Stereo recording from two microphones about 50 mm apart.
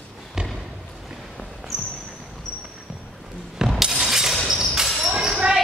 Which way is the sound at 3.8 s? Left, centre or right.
Centre.